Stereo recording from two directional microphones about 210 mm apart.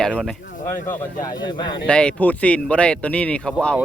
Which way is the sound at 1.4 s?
20° left (ahead or behind).